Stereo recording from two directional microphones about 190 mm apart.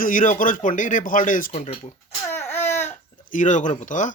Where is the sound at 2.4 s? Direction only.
10° left (ahead or behind).